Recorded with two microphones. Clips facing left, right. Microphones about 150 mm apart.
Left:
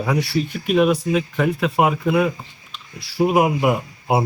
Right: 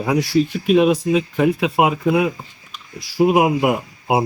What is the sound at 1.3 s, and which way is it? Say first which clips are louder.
Speech: right 2 dB; 15° right (ahead or behind).